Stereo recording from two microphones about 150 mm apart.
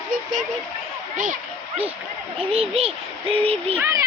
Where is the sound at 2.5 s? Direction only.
40° right (ahead or behind).